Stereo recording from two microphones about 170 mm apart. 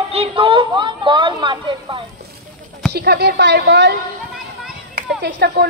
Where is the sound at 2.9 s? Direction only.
70° right (ahead or behind).